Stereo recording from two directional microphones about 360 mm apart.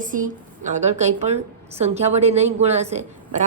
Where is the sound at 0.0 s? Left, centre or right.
Right.